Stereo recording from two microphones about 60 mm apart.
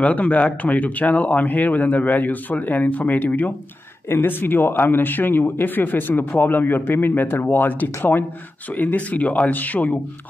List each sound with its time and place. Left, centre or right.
0.0 s speech: left